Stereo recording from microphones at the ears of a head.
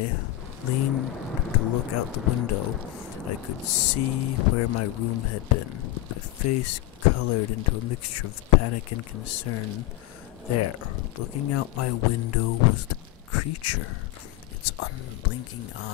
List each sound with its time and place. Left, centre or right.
0.7 s speech: left